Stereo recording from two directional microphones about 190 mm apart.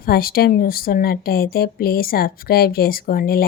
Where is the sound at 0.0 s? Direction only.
50° left (ahead or behind).